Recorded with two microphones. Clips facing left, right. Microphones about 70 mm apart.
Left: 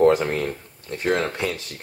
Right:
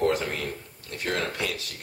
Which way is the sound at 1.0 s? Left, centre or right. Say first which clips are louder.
Left 6 dB; left.